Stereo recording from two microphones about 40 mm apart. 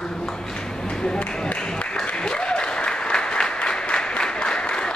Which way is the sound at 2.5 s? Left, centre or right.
Left.